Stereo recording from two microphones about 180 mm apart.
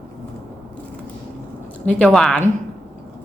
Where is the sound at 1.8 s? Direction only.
5° left (ahead or behind).